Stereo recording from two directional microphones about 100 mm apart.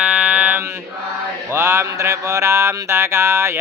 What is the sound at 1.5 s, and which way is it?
Mantra, 25° right (ahead or behind).